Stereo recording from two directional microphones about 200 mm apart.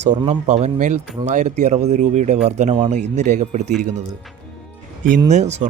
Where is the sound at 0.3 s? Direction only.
35° right (ahead or behind).